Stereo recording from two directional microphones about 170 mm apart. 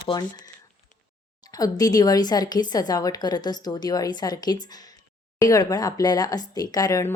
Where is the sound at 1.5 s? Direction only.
20° left (ahead or behind).